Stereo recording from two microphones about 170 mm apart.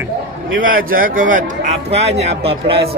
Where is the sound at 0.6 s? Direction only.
55° right (ahead or behind).